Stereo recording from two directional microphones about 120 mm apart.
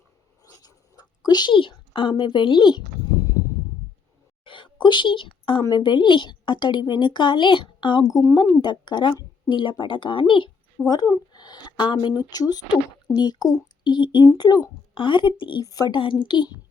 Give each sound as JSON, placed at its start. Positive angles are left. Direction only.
{"t": 0.4, "sound": "writing", "side_deg": 35}
{"t": 4.4, "sound": "a sound", "side_deg": 45}
{"t": 5.6, "sound": "a woman's voice", "side_deg": 40}
{"t": 10.8, "sound": "a woman's voice", "side_deg": 35}